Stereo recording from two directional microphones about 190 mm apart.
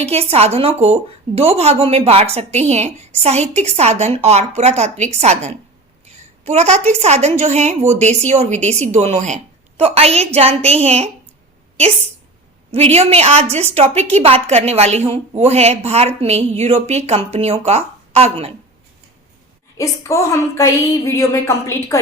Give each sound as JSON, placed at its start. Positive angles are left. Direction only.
{"t": 0.0, "sound": "a woman's voice", "side_deg": -30}
{"t": 12.7, "sound": "a woman's voice", "side_deg": -30}
{"t": 19.7, "sound": "a woman's voice", "side_deg": 15}